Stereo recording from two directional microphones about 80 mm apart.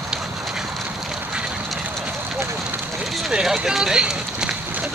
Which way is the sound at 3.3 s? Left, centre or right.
Centre.